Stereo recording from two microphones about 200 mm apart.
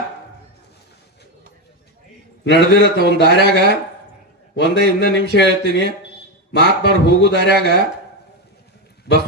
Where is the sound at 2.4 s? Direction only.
60° left (ahead or behind).